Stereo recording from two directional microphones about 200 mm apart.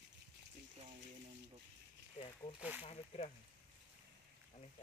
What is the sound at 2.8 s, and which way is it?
Speech, 30° left (ahead or behind).